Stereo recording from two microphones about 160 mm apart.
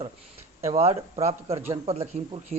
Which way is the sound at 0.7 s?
40° right (ahead or behind).